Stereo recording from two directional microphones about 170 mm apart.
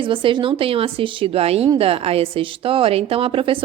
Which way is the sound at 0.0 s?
30° right (ahead or behind).